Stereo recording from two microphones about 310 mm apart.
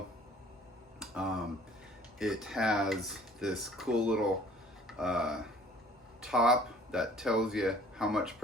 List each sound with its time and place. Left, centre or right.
0.9 s tick-tock: centre
2.1 s speech: centre